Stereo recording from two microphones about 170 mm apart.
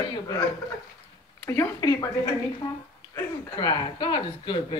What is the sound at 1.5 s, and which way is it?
Speech, 20° left (ahead or behind).